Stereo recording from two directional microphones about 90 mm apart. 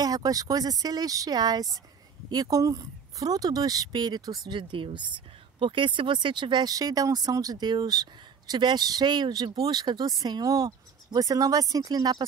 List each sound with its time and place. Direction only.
0.0 s speech: 45° right (ahead or behind)